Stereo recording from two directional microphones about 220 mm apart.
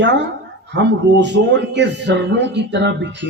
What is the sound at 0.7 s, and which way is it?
Speech, 50° right (ahead or behind).